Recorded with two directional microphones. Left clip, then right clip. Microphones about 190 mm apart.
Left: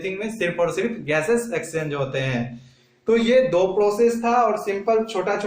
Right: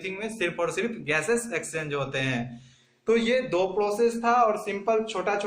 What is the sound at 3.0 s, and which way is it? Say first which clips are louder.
Speech: left 6 dB; 20° right (ahead or behind).